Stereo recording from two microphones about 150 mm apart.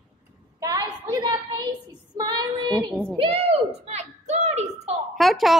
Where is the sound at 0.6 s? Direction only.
25° right (ahead or behind).